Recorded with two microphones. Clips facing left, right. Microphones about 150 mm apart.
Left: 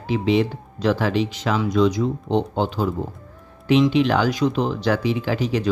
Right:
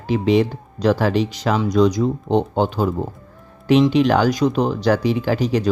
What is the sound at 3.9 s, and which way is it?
Speech, 45° right (ahead or behind).